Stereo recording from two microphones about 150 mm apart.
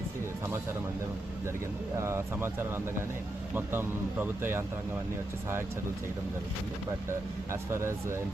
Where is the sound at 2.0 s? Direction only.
15° right (ahead or behind).